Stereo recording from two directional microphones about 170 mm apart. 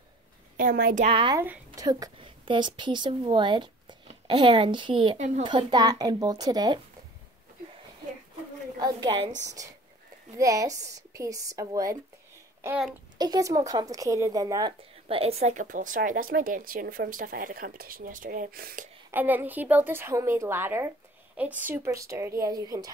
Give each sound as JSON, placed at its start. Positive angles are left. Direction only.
{"t": 0.6, "sound": "speech", "side_deg": -55}
{"t": 1.0, "sound": "speech", "side_deg": -30}
{"t": 1.3, "sound": "speech", "side_deg": -15}
{"t": 1.9, "sound": "a woman's voice", "side_deg": -25}
{"t": 8.7, "sound": "a woman's voice", "side_deg": -25}
{"t": 10.3, "sound": "a woman's voice", "side_deg": -20}
{"t": 12.6, "sound": "a woman's voice", "side_deg": -5}
{"t": 13.2, "sound": "a woman's voice", "side_deg": -20}
{"t": 15.0, "sound": "speech", "side_deg": -35}
{"t": 19.1, "sound": "a woman's voice", "side_deg": -10}